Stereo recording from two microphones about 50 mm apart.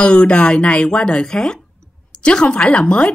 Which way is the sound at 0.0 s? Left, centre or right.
Centre.